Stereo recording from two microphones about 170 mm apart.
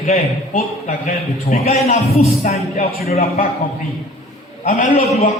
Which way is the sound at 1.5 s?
40° left (ahead or behind).